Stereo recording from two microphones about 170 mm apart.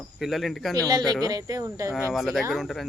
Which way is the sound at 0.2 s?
Centre (ahead or behind).